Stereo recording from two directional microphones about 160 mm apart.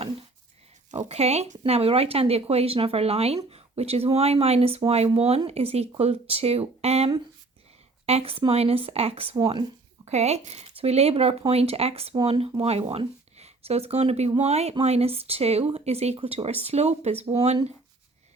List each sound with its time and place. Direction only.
0.9 s speech: 40° right (ahead or behind)
10.1 s speech: 45° right (ahead or behind)